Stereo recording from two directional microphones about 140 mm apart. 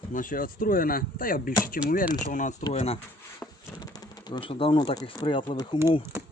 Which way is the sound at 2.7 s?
45° left (ahead or behind).